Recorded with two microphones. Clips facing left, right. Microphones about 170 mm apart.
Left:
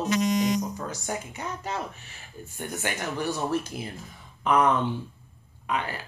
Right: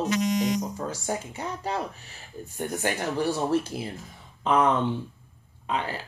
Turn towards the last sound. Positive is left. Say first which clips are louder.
# right 1 dB
turn(degrees=-30)  # may be behind; listen again after turning